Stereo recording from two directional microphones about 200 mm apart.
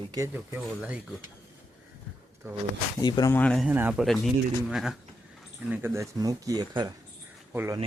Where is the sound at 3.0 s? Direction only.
20° left (ahead or behind).